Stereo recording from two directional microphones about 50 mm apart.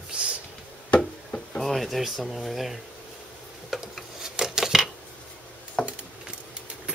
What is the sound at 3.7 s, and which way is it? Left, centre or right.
Rub, centre.